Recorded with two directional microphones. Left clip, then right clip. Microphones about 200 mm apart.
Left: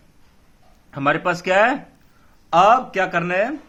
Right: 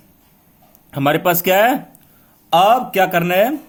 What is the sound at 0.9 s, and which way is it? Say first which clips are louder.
A man's voice: right 4 dB; 30° right (ahead or behind).